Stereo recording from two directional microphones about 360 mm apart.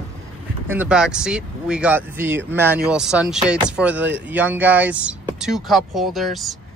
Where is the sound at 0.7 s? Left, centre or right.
Centre.